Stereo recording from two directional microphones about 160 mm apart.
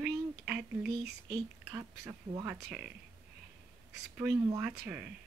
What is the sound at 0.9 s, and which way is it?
Speech, 90° right.